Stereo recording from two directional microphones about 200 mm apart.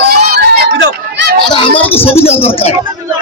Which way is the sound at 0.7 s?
65° right (ahead or behind).